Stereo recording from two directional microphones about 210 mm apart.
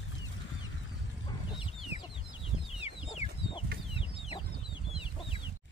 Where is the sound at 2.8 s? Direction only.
30° left (ahead or behind).